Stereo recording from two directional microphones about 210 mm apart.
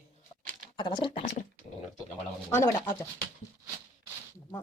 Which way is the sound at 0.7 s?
20° left (ahead or behind).